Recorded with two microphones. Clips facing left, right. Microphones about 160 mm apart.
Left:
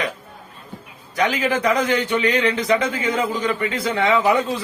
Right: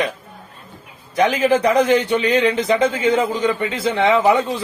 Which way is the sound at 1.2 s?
25° right (ahead or behind).